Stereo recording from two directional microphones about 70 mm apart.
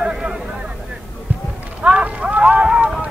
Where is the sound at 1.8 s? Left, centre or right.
Centre.